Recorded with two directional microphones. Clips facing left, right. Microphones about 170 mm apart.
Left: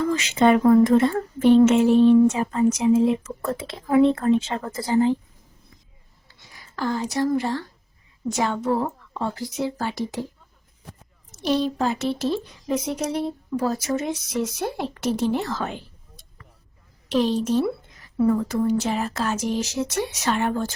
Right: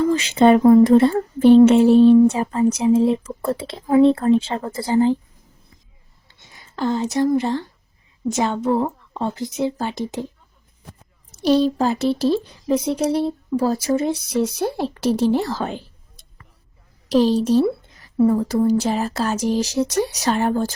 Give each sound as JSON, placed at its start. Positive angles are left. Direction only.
{"t": 0.1, "sound": "speech", "side_deg": -30}
{"t": 6.2, "sound": "a woman's voice", "side_deg": -25}
{"t": 11.3, "sound": "speech", "side_deg": -35}
{"t": 17.1, "sound": "speech", "side_deg": -35}